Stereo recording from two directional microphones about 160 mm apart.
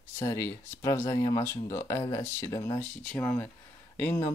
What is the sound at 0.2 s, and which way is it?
Speech, 20° left (ahead or behind).